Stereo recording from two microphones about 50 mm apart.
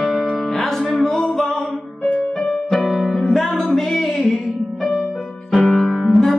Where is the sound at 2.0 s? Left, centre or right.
Left.